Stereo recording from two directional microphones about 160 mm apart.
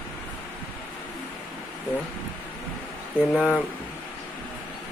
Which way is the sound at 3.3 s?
Centre (ahead or behind).